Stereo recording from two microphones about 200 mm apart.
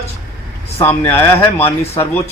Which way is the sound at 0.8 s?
10° left (ahead or behind).